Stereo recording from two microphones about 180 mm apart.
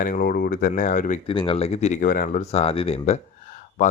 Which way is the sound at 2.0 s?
50° left (ahead or behind).